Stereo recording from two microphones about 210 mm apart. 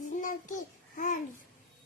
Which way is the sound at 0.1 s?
40° left (ahead or behind).